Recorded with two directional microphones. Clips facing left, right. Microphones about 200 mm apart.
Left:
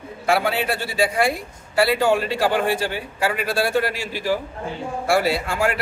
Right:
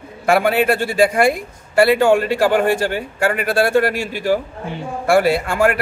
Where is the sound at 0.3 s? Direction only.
55° right (ahead or behind).